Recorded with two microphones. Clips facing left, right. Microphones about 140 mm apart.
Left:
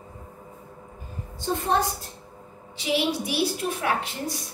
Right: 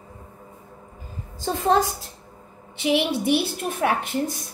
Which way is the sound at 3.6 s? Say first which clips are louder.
Right 3 dB; 50° right (ahead or behind).